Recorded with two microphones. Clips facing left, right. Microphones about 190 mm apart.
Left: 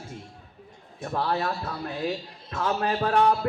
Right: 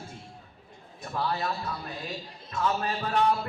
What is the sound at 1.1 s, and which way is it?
Speech, 60° left (ahead or behind).